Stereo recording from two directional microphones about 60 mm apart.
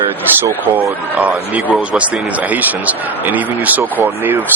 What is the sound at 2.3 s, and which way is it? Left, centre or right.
Speech, right.